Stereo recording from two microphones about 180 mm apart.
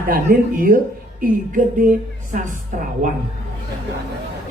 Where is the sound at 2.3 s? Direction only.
50° right (ahead or behind).